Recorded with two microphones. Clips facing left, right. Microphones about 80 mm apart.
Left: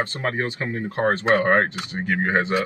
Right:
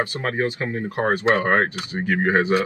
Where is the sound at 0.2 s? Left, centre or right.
Centre.